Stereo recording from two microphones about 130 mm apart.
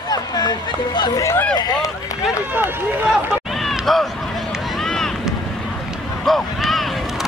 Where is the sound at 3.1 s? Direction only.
Centre (ahead or behind).